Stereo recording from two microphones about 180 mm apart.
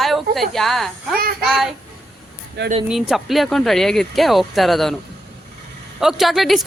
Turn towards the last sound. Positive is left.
turn(degrees=0)  # may be behind; listen again after turning